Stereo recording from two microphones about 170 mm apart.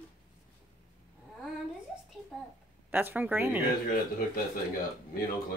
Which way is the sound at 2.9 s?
10° right (ahead or behind).